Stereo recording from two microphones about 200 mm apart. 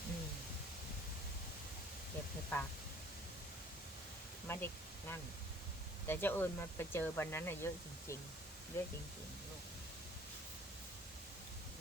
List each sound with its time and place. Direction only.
2.5 s speech: 10° left (ahead or behind)
4.4 s speech: 10° left (ahead or behind)
8.7 s speech: 15° left (ahead or behind)